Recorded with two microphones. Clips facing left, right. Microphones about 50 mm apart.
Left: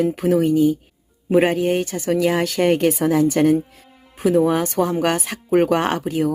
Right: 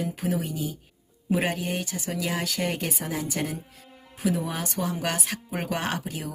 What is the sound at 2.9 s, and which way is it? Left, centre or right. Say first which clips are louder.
Speech: left 14 dB; left.